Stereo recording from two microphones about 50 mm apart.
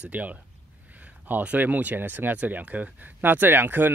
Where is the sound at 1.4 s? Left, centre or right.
Right.